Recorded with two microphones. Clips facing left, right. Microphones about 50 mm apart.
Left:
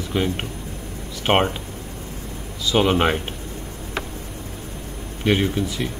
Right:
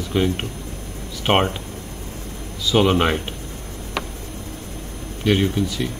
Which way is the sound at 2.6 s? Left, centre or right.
Centre.